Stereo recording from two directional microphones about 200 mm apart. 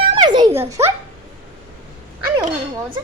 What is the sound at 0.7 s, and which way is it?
Speech, 15° right (ahead or behind).